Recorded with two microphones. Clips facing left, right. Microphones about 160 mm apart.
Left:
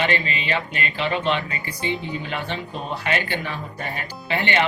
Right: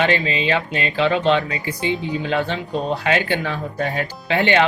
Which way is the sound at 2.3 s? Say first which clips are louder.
Right 7 dB; 90° right.